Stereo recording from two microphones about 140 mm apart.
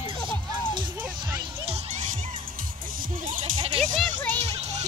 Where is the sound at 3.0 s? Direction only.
75° right (ahead or behind).